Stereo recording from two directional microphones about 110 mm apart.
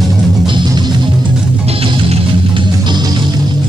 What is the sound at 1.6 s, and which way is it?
Music, 60° right (ahead or behind).